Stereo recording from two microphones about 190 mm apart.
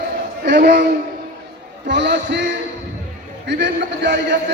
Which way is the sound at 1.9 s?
65° right (ahead or behind).